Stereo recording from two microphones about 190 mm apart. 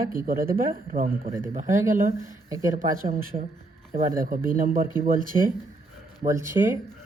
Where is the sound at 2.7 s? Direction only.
45° right (ahead or behind).